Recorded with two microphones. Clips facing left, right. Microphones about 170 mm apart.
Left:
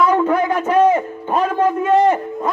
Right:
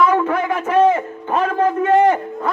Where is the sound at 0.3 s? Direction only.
20° left (ahead or behind).